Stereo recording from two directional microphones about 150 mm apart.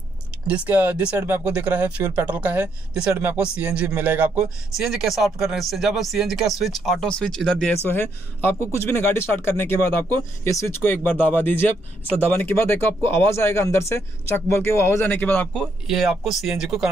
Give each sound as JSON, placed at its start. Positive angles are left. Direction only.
{"t": 0.5, "sound": "speech", "side_deg": -10}
{"t": 15.6, "sound": "speech", "side_deg": 0}